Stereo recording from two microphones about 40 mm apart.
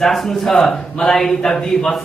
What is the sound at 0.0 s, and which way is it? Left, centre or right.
A man's voice, centre.